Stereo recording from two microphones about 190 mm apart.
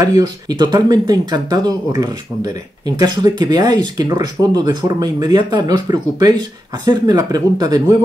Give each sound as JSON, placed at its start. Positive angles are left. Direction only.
{"t": 0.0, "sound": "speech", "side_deg": -20}